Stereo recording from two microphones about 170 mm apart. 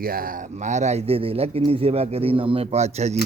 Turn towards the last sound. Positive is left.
turn(degrees=-40)  # may be behind; listen again after turning